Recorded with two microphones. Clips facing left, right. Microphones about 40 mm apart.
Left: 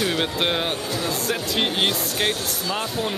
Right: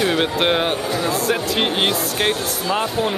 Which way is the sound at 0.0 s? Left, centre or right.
Centre.